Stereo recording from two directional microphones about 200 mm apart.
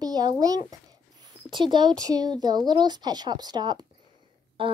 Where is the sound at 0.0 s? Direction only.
20° right (ahead or behind).